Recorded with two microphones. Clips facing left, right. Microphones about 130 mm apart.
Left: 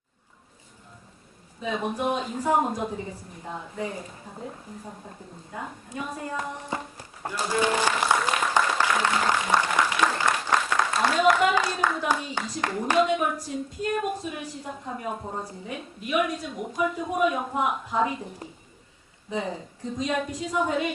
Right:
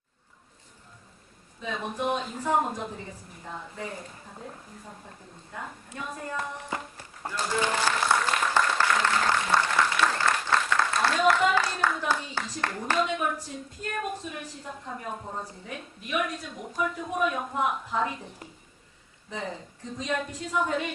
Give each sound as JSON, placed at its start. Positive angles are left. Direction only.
{"t": 1.6, "sound": "a woman's voice", "side_deg": 10}
{"t": 5.5, "sound": "walk", "side_deg": 10}
{"t": 10.8, "sound": "a sound", "side_deg": 15}
{"t": 11.9, "sound": "a woman's voice", "side_deg": 10}
{"t": 19.3, "sound": "a woman's voice", "side_deg": 10}